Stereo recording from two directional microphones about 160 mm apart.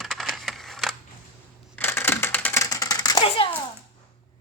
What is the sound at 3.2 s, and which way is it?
Speech, 35° left (ahead or behind).